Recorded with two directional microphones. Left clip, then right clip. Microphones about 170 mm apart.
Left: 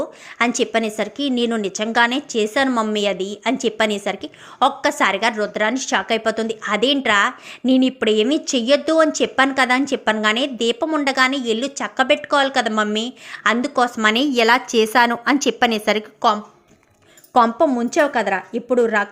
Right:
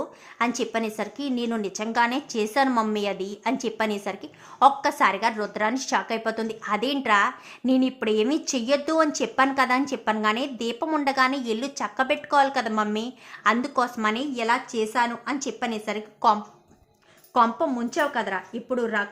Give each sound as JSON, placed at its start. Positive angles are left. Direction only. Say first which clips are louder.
{"t": 0.0, "sound": "a woman's voice", "louder": "left 6 dB", "side_deg": 20}
{"t": 17.3, "sound": "a woman's voice", "louder": "left 6 dB", "side_deg": 25}